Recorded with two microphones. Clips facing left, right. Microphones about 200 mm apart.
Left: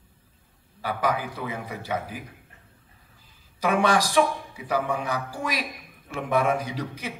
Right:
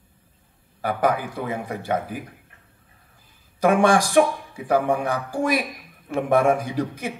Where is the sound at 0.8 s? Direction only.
55° right (ahead or behind).